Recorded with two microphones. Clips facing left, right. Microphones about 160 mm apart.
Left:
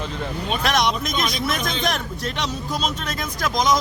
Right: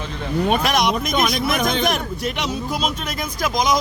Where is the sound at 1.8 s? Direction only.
10° right (ahead or behind).